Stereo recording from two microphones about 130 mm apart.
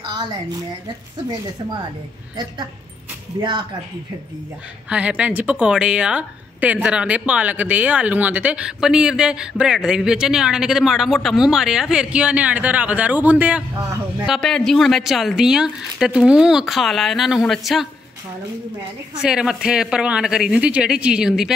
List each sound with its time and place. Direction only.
3.3 s speech: 35° right (ahead or behind)
4.8 s a woman's voice: 10° right (ahead or behind)
14.2 s a woman's voice: centre (ahead or behind)
19.2 s a woman's voice: 5° right (ahead or behind)